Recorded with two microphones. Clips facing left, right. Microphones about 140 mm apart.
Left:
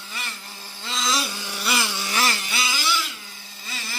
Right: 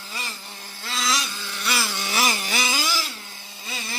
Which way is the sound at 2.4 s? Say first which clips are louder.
Right 2 dB; 45° right (ahead or behind).